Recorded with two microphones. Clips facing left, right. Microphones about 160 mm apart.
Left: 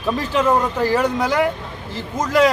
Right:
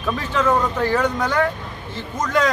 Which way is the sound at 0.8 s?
10° left (ahead or behind).